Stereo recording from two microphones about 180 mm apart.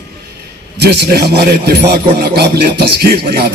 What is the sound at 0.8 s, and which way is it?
A man's voice, 65° right (ahead or behind).